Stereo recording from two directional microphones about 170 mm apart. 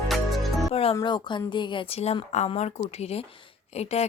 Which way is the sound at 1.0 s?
25° left (ahead or behind).